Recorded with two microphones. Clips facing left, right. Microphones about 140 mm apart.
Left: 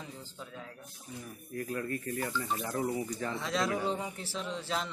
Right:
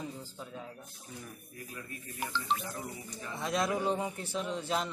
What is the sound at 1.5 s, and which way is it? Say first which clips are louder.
Speech: left 14 dB; 55° left (ahead or behind).